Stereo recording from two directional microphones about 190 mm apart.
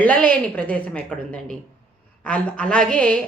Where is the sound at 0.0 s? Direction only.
5° left (ahead or behind).